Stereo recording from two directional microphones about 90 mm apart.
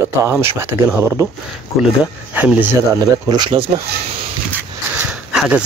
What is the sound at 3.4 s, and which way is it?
Speech, 70° right (ahead or behind).